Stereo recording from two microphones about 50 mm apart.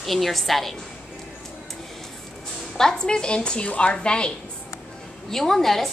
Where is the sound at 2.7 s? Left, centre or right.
Centre.